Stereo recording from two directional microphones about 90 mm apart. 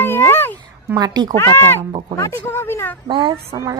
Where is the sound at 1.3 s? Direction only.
30° left (ahead or behind).